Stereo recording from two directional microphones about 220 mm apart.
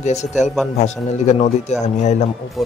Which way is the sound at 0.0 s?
30° left (ahead or behind).